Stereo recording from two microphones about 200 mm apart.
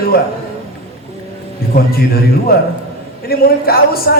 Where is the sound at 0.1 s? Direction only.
50° left (ahead or behind).